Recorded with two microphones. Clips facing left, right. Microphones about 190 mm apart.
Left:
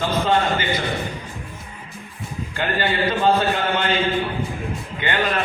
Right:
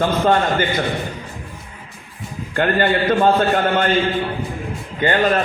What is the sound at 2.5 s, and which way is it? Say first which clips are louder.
A man's voice: right 6 dB; 55° right (ahead or behind).